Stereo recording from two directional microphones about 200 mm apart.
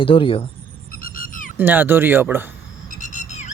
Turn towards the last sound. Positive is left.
turn(degrees=35)  # may be behind; listen again after turning